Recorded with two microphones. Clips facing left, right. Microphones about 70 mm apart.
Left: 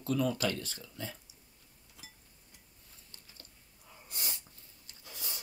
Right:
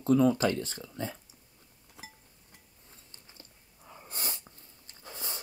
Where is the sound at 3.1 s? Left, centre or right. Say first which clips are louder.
Right 1 dB; right.